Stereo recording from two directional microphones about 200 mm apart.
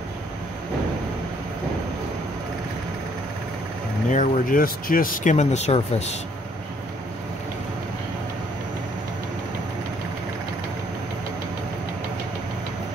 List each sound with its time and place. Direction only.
4.1 s speech: 40° left (ahead or behind)